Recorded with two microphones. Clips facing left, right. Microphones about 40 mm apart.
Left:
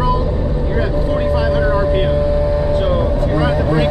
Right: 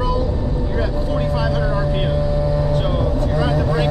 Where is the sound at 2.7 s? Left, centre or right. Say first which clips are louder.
Left 4 dB; centre.